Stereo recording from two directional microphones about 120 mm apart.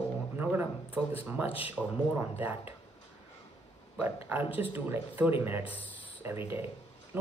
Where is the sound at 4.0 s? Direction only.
20° right (ahead or behind).